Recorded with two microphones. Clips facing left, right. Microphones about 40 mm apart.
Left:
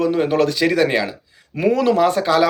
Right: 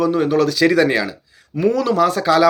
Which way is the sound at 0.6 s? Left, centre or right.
Centre.